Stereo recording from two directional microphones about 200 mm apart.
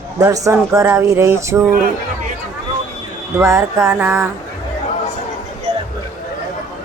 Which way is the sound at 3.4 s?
15° right (ahead or behind).